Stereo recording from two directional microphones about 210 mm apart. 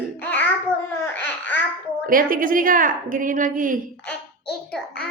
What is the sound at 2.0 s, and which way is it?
A woman's voice, 40° right (ahead or behind).